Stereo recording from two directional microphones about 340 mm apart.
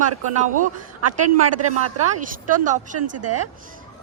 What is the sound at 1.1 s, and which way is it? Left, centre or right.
Speech, right.